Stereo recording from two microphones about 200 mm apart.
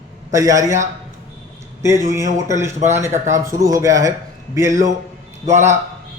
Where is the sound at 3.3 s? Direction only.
15° right (ahead or behind).